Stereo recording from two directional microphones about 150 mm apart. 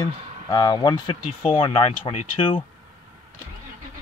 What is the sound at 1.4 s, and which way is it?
Speech, 40° left (ahead or behind).